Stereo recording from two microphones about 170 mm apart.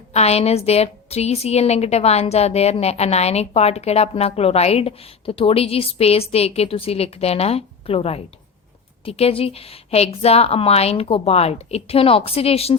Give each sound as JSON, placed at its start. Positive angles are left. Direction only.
{"t": 0.1, "sound": "a woman's voice", "side_deg": 40}